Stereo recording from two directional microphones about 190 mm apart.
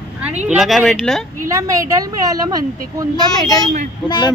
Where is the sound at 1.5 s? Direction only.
15° right (ahead or behind).